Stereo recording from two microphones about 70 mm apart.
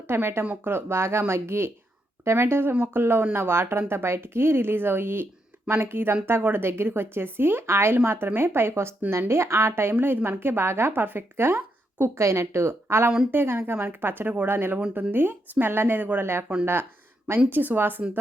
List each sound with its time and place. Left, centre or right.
0.1 s a woman's voice: right
17.5 s speech: right